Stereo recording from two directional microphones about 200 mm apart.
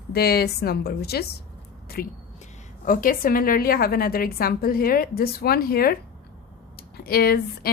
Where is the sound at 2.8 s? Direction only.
45° left (ahead or behind).